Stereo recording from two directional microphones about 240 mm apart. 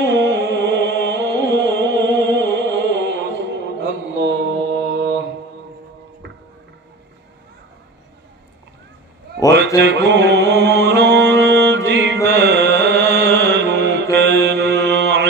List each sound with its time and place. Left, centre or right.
0.1 s music: right
9.8 s music: right
14.1 s mantra: right